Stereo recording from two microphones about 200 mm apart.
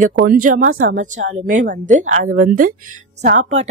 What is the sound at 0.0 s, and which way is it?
Speech, 45° right (ahead or behind).